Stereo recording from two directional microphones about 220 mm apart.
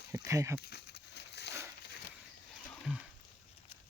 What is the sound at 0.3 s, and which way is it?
Speech, 15° right (ahead or behind).